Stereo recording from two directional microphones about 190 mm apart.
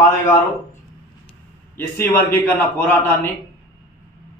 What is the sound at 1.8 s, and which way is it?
A man's voice, 10° left (ahead or behind).